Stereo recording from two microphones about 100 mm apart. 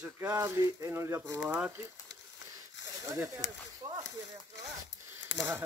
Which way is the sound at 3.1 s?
25° right (ahead or behind).